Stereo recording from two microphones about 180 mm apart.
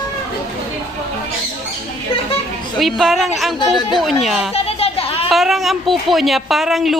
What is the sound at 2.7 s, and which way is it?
A woman's voice, centre (ahead or behind).